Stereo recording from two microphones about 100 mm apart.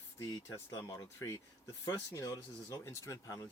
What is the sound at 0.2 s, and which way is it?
Speech, 30° left (ahead or behind).